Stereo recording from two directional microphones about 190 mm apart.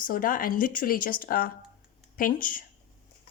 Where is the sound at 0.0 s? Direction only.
45° left (ahead or behind).